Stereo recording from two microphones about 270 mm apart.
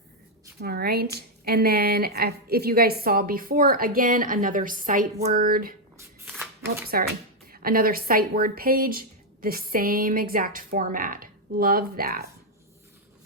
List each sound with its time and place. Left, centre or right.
0.6 s speech: right
6.1 s shuffling cards: centre
7.4 s speech: right